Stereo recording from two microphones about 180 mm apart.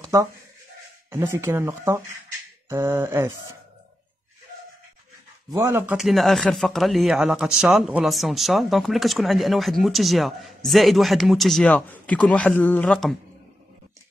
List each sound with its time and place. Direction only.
0.1 s speech: 15° right (ahead or behind)
5.5 s speech: 15° right (ahead or behind); by 13.1 s 5° left (ahead or behind)